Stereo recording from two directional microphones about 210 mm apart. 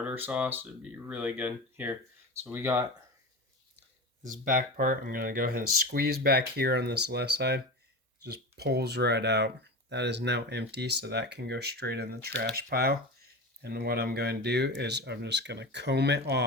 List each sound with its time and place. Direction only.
0.0 s speech: 10° right (ahead or behind)
4.3 s speech: 40° right (ahead or behind)